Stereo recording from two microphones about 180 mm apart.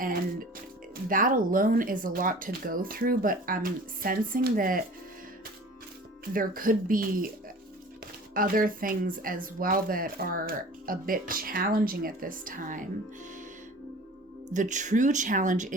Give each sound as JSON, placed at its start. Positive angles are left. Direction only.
{"t": 0.0, "sound": "speech", "side_deg": -50}
{"t": 6.3, "sound": "speech", "side_deg": -50}
{"t": 8.3, "sound": "speech", "side_deg": -50}
{"t": 14.5, "sound": "speech", "side_deg": -45}